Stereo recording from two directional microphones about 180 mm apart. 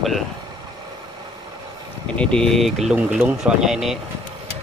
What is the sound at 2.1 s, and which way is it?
Speech, 5° left (ahead or behind).